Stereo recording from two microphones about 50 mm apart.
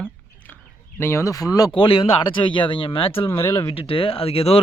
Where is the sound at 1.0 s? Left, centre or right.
Left.